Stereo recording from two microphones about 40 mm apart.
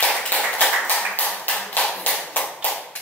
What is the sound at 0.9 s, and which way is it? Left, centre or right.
Tap, left.